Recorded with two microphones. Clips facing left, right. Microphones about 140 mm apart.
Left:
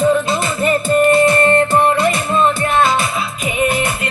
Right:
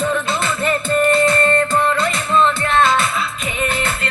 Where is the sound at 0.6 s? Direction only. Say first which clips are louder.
Left 4 dB; 15° left (ahead or behind).